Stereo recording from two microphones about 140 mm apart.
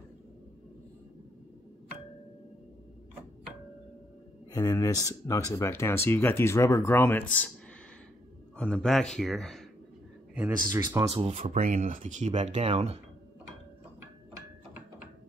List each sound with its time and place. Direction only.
4.5 s speech: 25° left (ahead or behind); by 7.5 s 10° left (ahead or behind)
8.5 s speech: 5° left (ahead or behind)
10.7 s speech: 25° right (ahead or behind)
11.1 s speech: 50° right (ahead or behind)
11.5 s speech: 75° right (ahead or behind); by 13.0 s 45° right (ahead or behind)